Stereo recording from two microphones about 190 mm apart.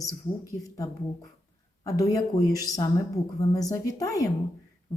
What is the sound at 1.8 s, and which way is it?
A woman's voice, 20° left (ahead or behind).